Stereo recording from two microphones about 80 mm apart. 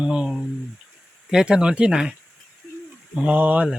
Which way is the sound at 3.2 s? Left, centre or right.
Centre.